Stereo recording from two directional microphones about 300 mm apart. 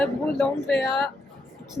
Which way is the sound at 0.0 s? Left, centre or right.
Centre.